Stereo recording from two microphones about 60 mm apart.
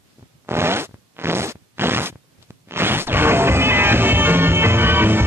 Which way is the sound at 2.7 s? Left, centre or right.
Right.